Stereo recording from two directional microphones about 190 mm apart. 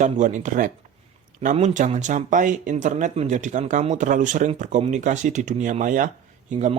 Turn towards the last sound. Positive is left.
turn(degrees=-40)  # may be behind; listen again after turning